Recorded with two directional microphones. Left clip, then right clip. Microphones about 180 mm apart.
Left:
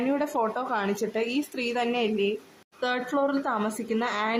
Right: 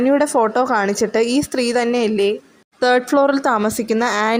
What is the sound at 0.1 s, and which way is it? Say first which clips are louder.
A woman's voice: right 11 dB; 35° right (ahead or behind).